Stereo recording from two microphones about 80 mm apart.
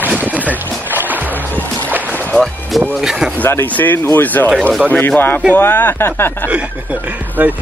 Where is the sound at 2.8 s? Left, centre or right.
Centre.